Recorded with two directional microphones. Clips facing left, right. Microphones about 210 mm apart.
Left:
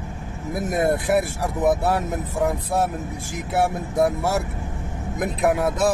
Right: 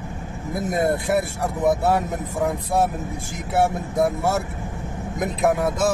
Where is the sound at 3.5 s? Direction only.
Centre (ahead or behind).